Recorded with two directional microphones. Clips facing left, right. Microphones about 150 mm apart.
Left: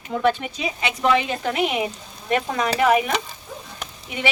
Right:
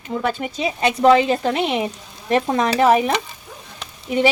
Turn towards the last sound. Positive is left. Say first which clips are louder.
# right 12 dB
turn(degrees=-35)  # may be behind; listen again after turning